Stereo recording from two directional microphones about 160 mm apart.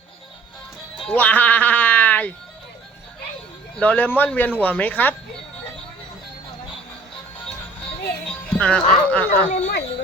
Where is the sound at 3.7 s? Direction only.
10° left (ahead or behind).